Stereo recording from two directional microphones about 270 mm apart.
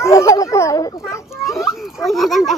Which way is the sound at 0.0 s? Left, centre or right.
Centre.